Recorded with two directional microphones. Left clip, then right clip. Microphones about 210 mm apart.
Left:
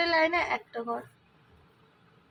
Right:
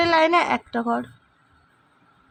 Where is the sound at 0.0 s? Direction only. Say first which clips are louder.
Right 8 dB; 50° right (ahead or behind).